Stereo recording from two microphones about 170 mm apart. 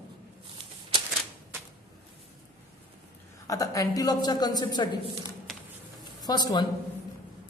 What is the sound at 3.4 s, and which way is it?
A woman's voice, 20° left (ahead or behind).